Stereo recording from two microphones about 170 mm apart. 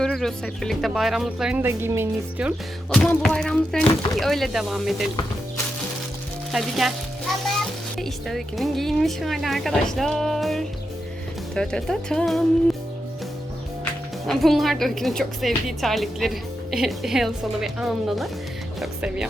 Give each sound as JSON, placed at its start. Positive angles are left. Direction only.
{"t": 0.0, "sound": "a woman's voice", "side_deg": 5}
{"t": 1.6, "sound": "speech", "side_deg": -15}
{"t": 2.9, "sound": "a woman's voice", "side_deg": 5}
{"t": 6.5, "sound": "music", "side_deg": 0}
{"t": 7.9, "sound": "a woman's voice", "side_deg": 0}
{"t": 14.3, "sound": "a woman's voice", "side_deg": 0}